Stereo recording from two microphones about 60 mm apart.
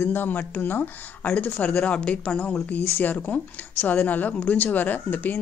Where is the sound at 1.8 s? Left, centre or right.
Left.